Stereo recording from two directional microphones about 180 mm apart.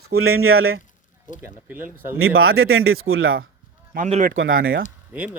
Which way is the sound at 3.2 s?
90° right.